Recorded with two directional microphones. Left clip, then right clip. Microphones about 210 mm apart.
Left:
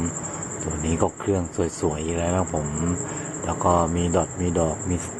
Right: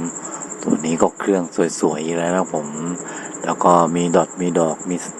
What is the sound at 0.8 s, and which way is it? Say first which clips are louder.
Speech: right 5 dB; 20° right (ahead or behind).